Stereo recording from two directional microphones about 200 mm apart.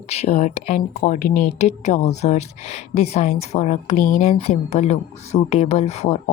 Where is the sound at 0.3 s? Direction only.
30° left (ahead or behind).